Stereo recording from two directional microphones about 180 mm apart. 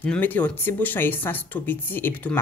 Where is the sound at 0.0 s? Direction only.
10° left (ahead or behind).